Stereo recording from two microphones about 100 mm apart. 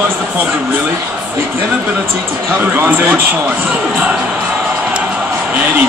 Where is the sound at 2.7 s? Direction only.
20° right (ahead or behind).